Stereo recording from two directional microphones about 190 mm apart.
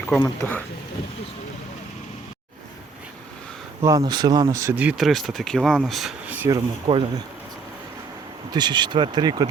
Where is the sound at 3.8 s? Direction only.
20° right (ahead or behind).